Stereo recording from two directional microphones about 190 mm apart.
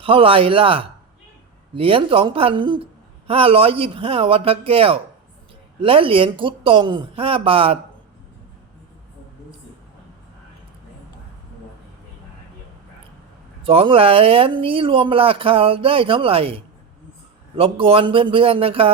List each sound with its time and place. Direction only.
0.0 s speech: 30° right (ahead or behind)
13.6 s speech: 30° right (ahead or behind)
17.6 s speech: 30° right (ahead or behind)